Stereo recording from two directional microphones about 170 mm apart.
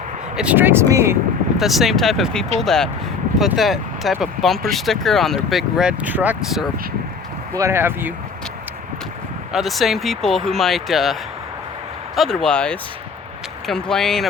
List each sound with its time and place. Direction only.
0.3 s speech: 10° right (ahead or behind)
1.5 s speech: centre (ahead or behind)
7.5 s speech: 15° right (ahead or behind)
9.5 s speech: centre (ahead or behind)